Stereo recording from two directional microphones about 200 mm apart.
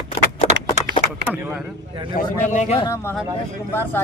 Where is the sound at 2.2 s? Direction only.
40° left (ahead or behind).